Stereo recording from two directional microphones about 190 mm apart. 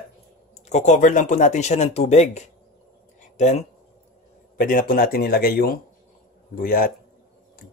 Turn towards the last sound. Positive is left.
turn(degrees=50)  # may be behind; listen again after turning